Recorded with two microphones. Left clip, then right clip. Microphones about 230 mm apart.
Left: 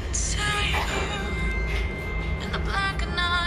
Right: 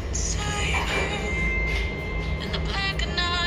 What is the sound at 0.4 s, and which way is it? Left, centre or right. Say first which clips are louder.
Music: left 2 dB; left.